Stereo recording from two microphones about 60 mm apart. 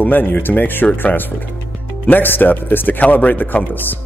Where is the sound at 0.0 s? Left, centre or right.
Left.